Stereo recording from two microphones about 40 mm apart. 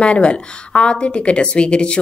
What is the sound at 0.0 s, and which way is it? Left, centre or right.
A woman's voice, left.